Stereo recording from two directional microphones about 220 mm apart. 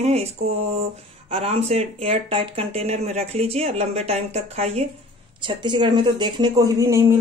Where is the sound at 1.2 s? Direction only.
25° right (ahead or behind).